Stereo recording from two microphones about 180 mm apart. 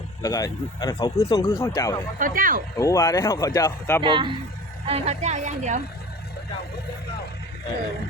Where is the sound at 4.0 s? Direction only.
30° right (ahead or behind).